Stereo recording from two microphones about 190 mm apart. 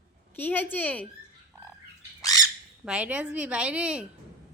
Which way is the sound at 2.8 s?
5° right (ahead or behind).